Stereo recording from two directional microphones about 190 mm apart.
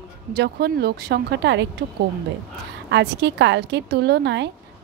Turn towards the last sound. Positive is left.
turn(degrees=-65)  # may be behind; listen again after turning